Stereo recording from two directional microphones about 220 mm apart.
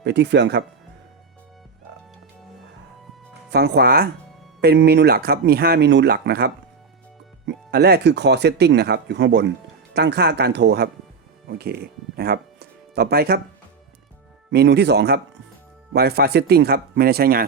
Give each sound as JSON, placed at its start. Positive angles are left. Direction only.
{"t": 0.0, "sound": "speech", "side_deg": -50}
{"t": 3.5, "sound": "speech", "side_deg": -45}
{"t": 14.5, "sound": "speech", "side_deg": -50}